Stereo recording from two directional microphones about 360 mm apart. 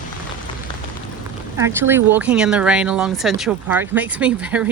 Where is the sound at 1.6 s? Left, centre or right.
Centre.